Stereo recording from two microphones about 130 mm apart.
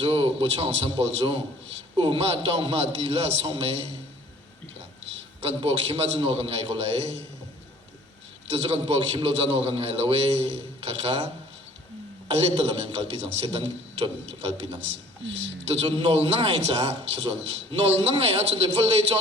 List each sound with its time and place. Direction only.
0.0 s a man's voice: 45° right (ahead or behind)
5.4 s a man's voice: 50° right (ahead or behind)
8.4 s a man's voice: 50° right (ahead or behind)
12.3 s a man's voice: 50° right (ahead or behind)